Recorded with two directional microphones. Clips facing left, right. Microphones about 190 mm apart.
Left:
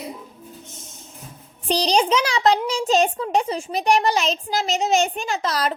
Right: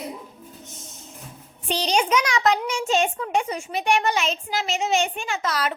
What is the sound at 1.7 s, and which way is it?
A child's voice, 35° left (ahead or behind).